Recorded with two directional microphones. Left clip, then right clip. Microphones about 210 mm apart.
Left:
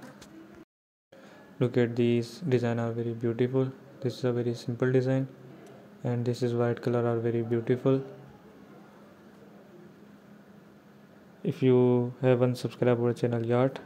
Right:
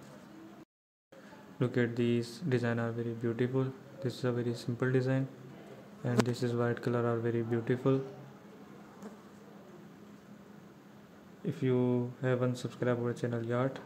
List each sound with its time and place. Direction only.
1.6 s speech: 15° left (ahead or behind)
11.4 s speech: 25° left (ahead or behind)